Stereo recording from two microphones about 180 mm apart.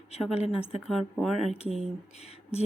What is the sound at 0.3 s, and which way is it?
Speech, 35° left (ahead or behind).